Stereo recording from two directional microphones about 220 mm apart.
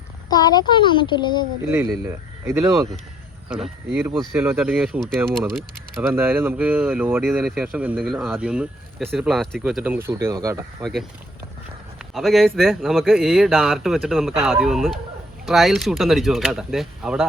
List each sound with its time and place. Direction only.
0.3 s speech: 20° left (ahead or behind)
1.6 s a man's voice: 10° right (ahead or behind)
6.0 s speech: 10° right (ahead or behind)
11.9 s a man's voice: centre (ahead or behind)